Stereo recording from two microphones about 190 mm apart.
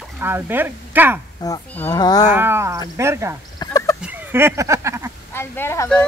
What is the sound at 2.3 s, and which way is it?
Speech, 10° right (ahead or behind).